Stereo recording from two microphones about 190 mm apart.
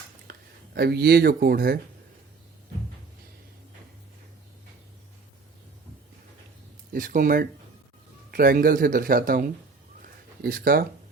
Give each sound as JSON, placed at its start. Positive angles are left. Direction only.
{"t": 0.3, "sound": "speech", "side_deg": -55}
{"t": 6.9, "sound": "speech", "side_deg": -45}
{"t": 10.0, "sound": "a sound", "side_deg": -50}